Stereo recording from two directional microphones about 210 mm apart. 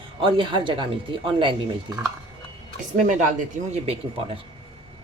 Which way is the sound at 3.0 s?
35° right (ahead or behind).